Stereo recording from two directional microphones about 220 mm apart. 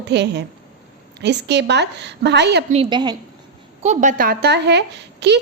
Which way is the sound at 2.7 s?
25° right (ahead or behind).